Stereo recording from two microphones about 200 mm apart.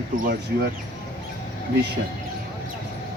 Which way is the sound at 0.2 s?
50° right (ahead or behind).